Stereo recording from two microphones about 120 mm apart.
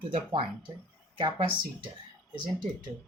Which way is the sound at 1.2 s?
45° right (ahead or behind).